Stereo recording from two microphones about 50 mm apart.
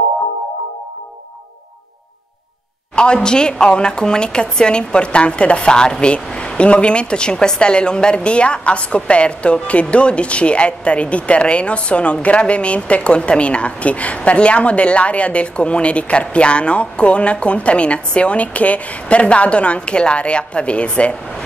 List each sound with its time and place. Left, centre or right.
3.0 s speech: centre